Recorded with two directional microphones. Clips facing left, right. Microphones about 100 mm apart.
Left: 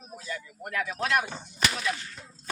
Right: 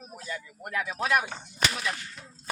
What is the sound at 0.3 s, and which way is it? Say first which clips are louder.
Speech: left 1 dB; 15° right (ahead or behind).